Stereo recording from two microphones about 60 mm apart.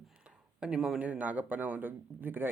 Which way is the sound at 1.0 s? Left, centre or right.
Right.